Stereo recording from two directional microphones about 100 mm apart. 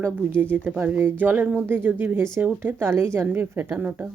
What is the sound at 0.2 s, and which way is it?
Speech, 15° right (ahead or behind).